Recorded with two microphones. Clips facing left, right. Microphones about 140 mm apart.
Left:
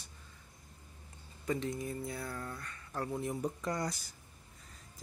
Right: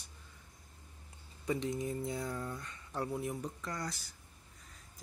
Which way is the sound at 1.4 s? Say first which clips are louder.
Right 1 dB; 15° right (ahead or behind).